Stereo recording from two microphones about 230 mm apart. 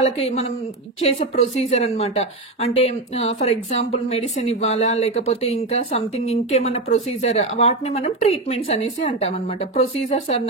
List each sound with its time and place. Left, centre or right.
0.0 s speech: left